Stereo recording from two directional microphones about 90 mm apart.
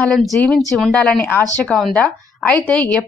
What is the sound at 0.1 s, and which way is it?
Speech, centre (ahead or behind).